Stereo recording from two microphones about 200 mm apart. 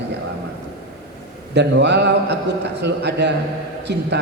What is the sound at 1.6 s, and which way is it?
A man's voice, 60° right (ahead or behind).